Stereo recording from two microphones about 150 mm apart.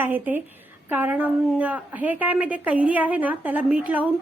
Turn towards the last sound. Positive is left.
turn(degrees=-10)  # may be behind; listen again after turning